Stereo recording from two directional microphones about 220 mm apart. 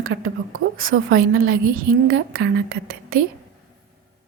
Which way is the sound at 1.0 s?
40° right (ahead or behind).